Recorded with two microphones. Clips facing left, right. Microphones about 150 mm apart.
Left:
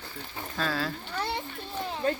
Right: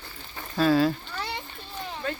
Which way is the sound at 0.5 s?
15° right (ahead or behind).